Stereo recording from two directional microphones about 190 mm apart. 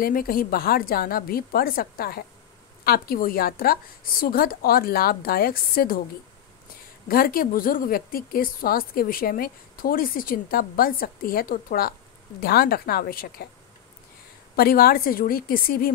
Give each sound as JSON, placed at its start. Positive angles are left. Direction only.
{"t": 0.0, "sound": "a woman's voice", "side_deg": 50}
{"t": 7.1, "sound": "a woman's voice", "side_deg": 50}
{"t": 14.5, "sound": "a woman's voice", "side_deg": 50}